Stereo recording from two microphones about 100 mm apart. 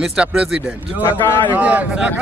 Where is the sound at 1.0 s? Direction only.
20° left (ahead or behind).